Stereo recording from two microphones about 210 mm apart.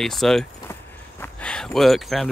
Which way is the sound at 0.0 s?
Centre (ahead or behind).